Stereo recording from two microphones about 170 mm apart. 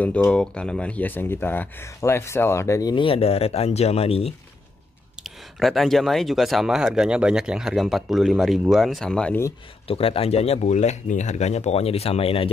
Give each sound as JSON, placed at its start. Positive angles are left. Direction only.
{"t": 0.0, "sound": "speech", "side_deg": 5}
{"t": 5.2, "sound": "speech", "side_deg": 0}
{"t": 9.8, "sound": "speech", "side_deg": 35}